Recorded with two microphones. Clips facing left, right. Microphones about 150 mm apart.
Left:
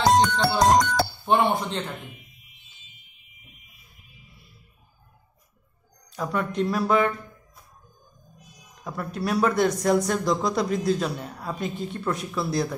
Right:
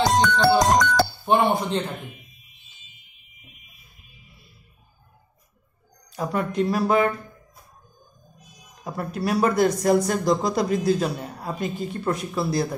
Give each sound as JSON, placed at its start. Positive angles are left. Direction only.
{"t": 0.2, "sound": "speech", "side_deg": -90}
{"t": 1.2, "sound": "speech", "side_deg": -10}
{"t": 6.0, "sound": "speech", "side_deg": -5}
{"t": 8.8, "sound": "speech", "side_deg": -5}